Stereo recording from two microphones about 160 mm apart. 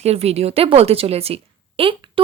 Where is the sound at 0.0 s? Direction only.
40° right (ahead or behind).